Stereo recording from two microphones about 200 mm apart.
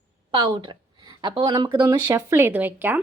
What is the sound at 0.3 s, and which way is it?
A woman's voice, 25° right (ahead or behind).